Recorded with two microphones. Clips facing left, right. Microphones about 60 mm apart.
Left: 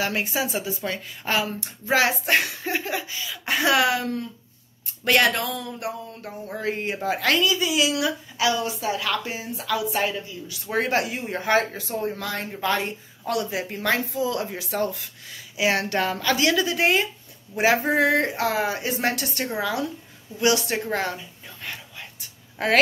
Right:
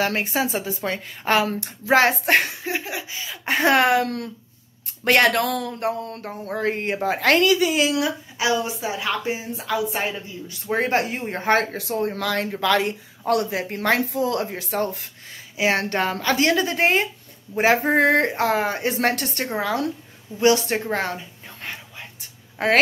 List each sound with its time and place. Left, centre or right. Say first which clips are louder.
0.0 s speech: right 3 dB; right
2.6 s laughter: left 1 dB; centre
3.1 s a woman's voice: even; right
3.4 s speech: right 3 dB; right
6.5 s speech: right 4 dB; right
8.0 s a woman's voice: even; right
10.5 s speech: right 2 dB; right
11.7 s speech: right 3 dB; right
13.2 s speech: right 4 dB; right
20.3 s speech: right 4 dB; right
21.6 s a sound: right 1 dB; right